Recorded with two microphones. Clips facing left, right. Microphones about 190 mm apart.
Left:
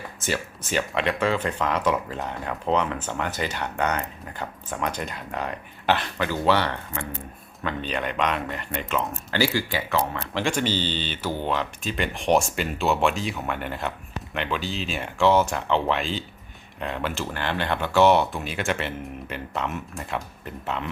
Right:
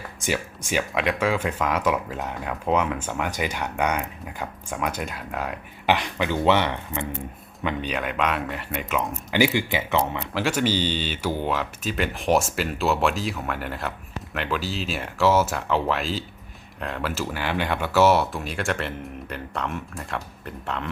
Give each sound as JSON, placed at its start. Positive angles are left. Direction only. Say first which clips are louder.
{"t": 0.2, "sound": "speech", "louder": "right 2 dB", "side_deg": -10}
{"t": 7.9, "sound": "speech", "louder": "left 2 dB", "side_deg": -5}
{"t": 10.3, "sound": "speech", "louder": "right 1 dB", "side_deg": -5}